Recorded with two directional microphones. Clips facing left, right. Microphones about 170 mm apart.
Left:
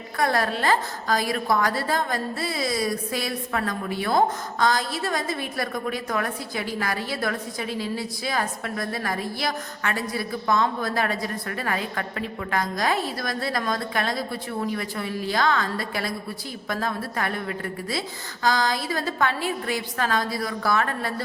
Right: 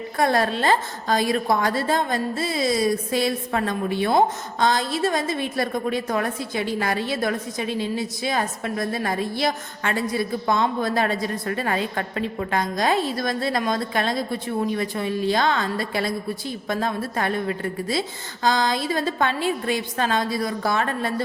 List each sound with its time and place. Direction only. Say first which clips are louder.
0.2 s a woman's voice: right 3 dB; 25° right (ahead or behind)